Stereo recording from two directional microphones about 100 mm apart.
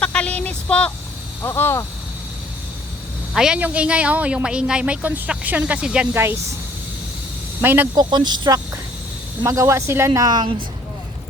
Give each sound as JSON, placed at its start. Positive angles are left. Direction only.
{"t": 0.0, "sound": "speech", "side_deg": 10}
{"t": 1.4, "sound": "speech", "side_deg": 25}
{"t": 3.3, "sound": "a man's voice", "side_deg": -5}
{"t": 6.1, "sound": "speech", "side_deg": -25}
{"t": 7.6, "sound": "speech", "side_deg": -20}
{"t": 7.9, "sound": "speech", "side_deg": -45}
{"t": 9.4, "sound": "speech", "side_deg": -30}
{"t": 10.2, "sound": "speech", "side_deg": -40}